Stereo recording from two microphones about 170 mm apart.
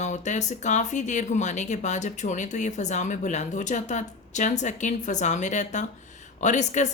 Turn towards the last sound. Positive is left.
turn(degrees=45)  # may be behind; listen again after turning